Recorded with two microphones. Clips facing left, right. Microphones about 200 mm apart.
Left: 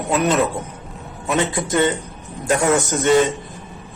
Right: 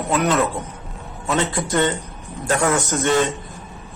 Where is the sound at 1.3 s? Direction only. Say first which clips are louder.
Left 1 dB; 15° left (ahead or behind).